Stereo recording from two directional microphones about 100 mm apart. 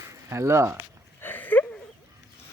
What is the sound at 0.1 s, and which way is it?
Speech, 30° right (ahead or behind).